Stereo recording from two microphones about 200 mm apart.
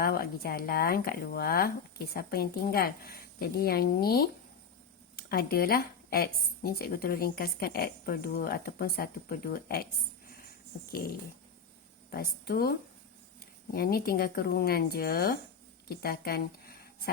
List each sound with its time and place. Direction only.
0.0 s a woman's voice: 50° left (ahead or behind)
12.1 s a woman's voice: 50° left (ahead or behind)
13.7 s a woman's voice: 50° left (ahead or behind)